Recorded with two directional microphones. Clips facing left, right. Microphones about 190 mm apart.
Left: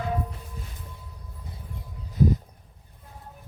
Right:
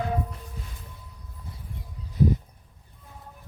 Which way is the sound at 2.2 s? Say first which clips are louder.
Left 1 dB; 45° left (ahead or behind).